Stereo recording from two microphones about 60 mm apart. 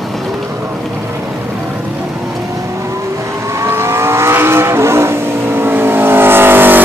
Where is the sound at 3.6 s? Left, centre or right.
Right.